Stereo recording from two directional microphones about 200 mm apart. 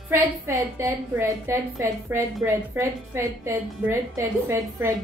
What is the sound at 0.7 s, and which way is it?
A woman's voice, 15° right (ahead or behind).